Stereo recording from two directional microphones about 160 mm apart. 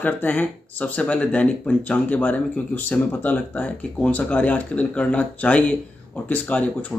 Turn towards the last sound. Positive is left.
turn(degrees=10)  # may be behind; listen again after turning